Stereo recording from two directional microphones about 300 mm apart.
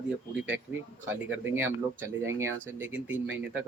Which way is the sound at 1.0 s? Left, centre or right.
Centre.